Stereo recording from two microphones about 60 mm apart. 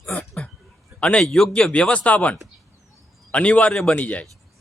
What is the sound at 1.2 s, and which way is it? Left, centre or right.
Speech, centre.